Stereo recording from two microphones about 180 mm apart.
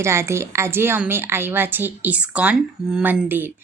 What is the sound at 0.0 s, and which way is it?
A woman's voice, 15° right (ahead or behind).